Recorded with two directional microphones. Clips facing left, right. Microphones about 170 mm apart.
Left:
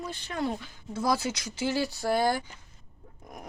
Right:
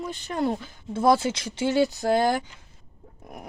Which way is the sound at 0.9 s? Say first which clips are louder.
Right 7 dB; 25° right (ahead or behind).